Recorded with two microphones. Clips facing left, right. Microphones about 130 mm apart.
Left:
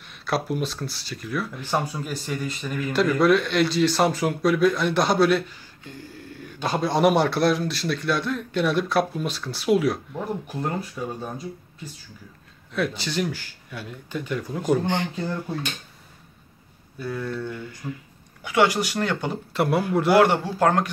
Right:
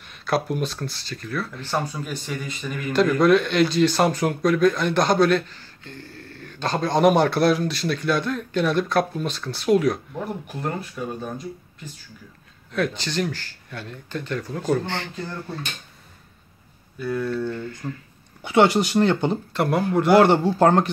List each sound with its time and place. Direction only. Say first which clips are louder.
0.3 s speech: right 2 dB; centre (ahead or behind)
12.7 s speech: right 1 dB; 5° left (ahead or behind)
17.0 s speech: right 4 dB; 5° left (ahead or behind)
18.4 s speech: right 3 dB; 25° right (ahead or behind)
19.5 s speech: left 1 dB; 5° left (ahead or behind)
20.2 s speech: right 4 dB; 30° right (ahead or behind)